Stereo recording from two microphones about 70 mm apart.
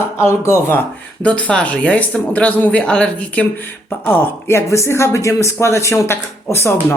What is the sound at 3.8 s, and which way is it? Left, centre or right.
Speech, left.